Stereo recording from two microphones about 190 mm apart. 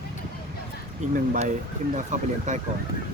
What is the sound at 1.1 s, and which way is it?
Speech, 45° right (ahead or behind).